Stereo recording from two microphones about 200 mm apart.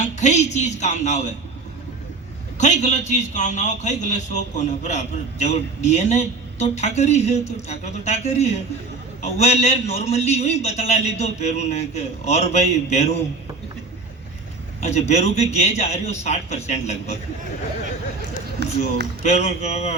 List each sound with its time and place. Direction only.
0.0 s a man's voice: 35° left (ahead or behind)
2.6 s a man's voice: 35° left (ahead or behind)
14.8 s a man's voice: 35° left (ahead or behind)
18.6 s speech: 60° right (ahead or behind)
19.2 s a man's voice: 35° left (ahead or behind)